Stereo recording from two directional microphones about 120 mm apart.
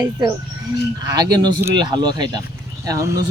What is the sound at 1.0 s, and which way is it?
Speech, 30° right (ahead or behind).